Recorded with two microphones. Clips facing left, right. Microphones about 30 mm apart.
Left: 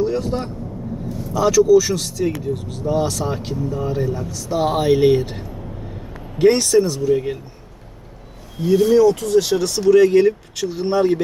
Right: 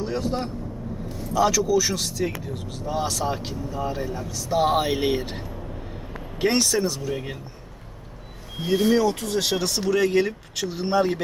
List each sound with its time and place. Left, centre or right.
0.0 s speech: centre
6.4 s speech: centre
8.6 s speech: right
9.0 s speech: right
9.9 s speech: centre